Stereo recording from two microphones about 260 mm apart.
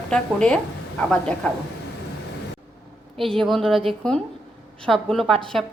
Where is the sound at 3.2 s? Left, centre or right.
Centre.